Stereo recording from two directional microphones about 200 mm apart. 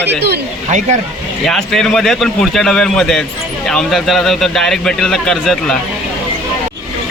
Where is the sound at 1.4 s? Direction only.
Centre (ahead or behind).